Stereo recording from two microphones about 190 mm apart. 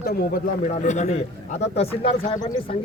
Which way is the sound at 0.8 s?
40° left (ahead or behind).